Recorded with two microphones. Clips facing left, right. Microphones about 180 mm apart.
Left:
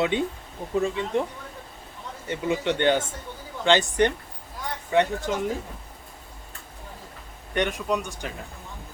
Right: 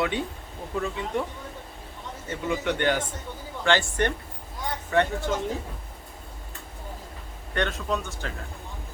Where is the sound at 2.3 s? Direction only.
20° left (ahead or behind).